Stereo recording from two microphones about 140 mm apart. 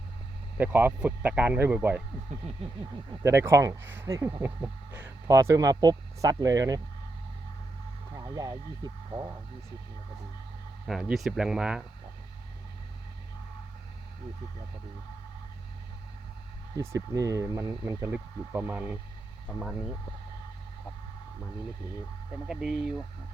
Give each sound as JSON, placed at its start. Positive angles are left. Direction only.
{"t": 0.5, "sound": "speech", "side_deg": -15}
{"t": 3.1, "sound": "speech", "side_deg": -20}
{"t": 4.4, "sound": "speech", "side_deg": -10}
{"t": 8.1, "sound": "speech", "side_deg": -20}
{"t": 10.8, "sound": "speech", "side_deg": 0}
{"t": 16.7, "sound": "speech", "side_deg": -20}
{"t": 22.4, "sound": "speech", "side_deg": -5}